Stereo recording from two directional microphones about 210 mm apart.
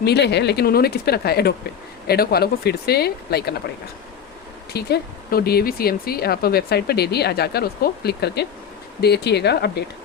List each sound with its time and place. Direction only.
0.0 s speech: 50° left (ahead or behind)
4.7 s speech: 50° left (ahead or behind)